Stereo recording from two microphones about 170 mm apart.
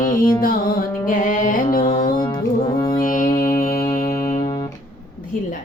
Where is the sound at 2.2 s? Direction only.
25° left (ahead or behind).